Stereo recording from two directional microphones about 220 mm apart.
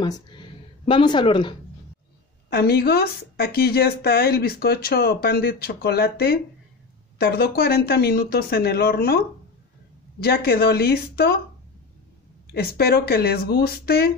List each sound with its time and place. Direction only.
0.0 s a sound: 20° left (ahead or behind)
2.5 s speech: 45° left (ahead or behind)
10.2 s speech: 45° left (ahead or behind)
12.5 s speech: 45° left (ahead or behind)